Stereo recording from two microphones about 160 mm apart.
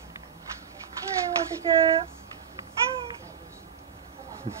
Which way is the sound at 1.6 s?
35° right (ahead or behind).